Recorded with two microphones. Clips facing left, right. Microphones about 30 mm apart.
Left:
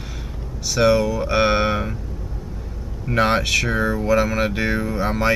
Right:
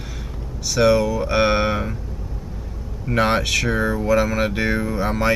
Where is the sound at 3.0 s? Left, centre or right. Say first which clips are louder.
Even; centre.